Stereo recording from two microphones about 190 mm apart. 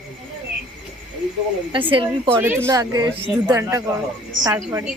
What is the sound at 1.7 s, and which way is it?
Speech, 25° right (ahead or behind).